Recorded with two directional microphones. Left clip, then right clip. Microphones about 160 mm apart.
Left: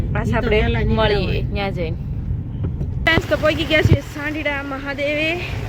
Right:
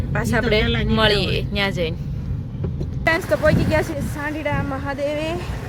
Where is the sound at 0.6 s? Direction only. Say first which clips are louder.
Even; 35° left (ahead or behind).